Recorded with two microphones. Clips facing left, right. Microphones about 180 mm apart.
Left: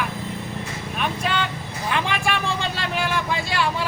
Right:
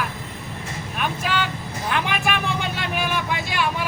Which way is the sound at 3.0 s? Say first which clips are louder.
Left 2 dB; 15° right (ahead or behind).